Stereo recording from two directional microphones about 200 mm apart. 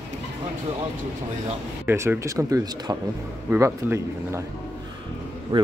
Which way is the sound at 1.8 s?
10° right (ahead or behind).